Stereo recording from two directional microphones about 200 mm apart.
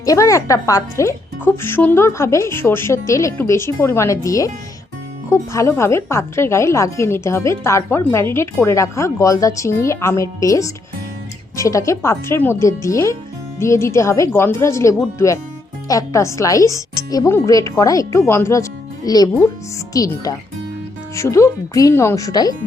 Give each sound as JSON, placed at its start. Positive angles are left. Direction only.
{"t": 0.0, "sound": "a woman's voice", "side_deg": 15}